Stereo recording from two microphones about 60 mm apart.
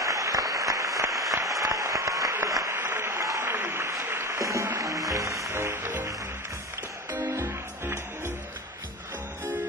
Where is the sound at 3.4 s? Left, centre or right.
Right.